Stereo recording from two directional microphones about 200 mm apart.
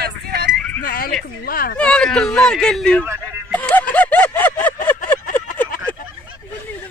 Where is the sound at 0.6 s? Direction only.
5° left (ahead or behind).